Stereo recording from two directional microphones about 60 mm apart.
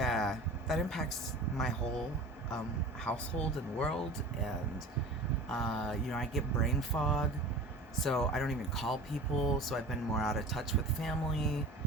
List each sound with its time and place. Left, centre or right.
0.0 s a sound: centre
3.0 s speech: centre
5.5 s speech: centre